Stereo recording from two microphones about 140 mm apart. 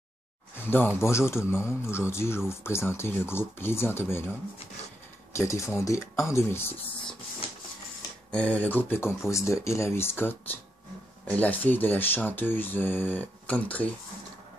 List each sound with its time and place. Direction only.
0.6 s speech: 15° left (ahead or behind)
5.3 s speech: 20° left (ahead or behind)
8.3 s speech: 10° left (ahead or behind)